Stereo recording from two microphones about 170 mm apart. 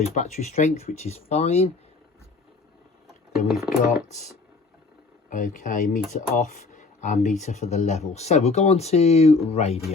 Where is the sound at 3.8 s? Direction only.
55° left (ahead or behind).